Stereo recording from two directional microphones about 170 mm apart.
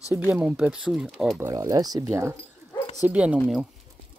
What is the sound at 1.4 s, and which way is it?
Speech, 15° right (ahead or behind).